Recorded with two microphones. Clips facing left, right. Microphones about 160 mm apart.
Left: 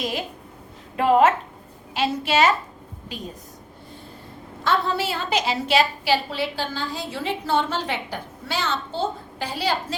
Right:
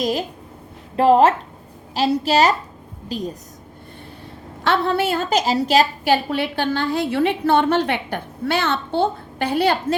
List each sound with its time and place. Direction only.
0.0 s a woman's voice: 40° right (ahead or behind)
4.6 s a woman's voice: 65° right (ahead or behind); by 6.1 s 40° right (ahead or behind)
6.3 s a woman's voice: 60° right (ahead or behind)